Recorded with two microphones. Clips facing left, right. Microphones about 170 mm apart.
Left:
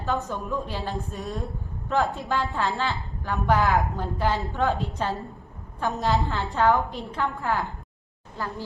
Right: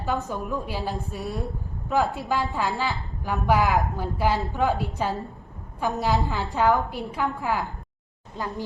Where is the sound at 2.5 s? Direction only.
10° right (ahead or behind).